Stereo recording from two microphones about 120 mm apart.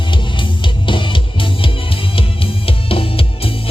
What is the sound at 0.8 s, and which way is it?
Music, 45° left (ahead or behind).